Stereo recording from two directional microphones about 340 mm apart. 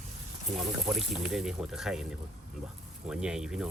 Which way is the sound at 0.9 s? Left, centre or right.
Centre.